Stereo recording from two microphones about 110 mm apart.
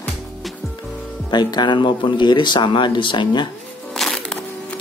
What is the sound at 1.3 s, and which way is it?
Speech, 40° left (ahead or behind).